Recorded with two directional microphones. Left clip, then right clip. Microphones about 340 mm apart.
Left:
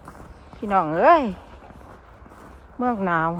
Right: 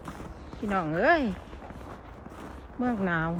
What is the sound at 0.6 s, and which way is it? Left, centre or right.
Speech, centre.